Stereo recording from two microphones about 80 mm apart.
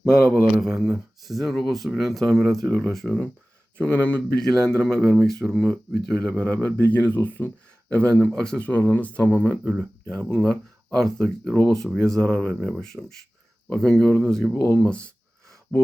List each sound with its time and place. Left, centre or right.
0.6 s speech: centre
2.6 s speech: centre
3.8 s speech: centre
6.3 s speech: centre
9.6 s speech: centre
10.2 s speech: centre
15.7 s speech: centre